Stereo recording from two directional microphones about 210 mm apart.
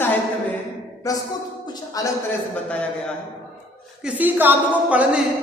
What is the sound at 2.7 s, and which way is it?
Speech, 5° left (ahead or behind).